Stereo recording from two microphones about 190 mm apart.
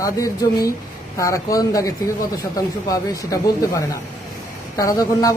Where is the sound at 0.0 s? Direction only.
15° left (ahead or behind).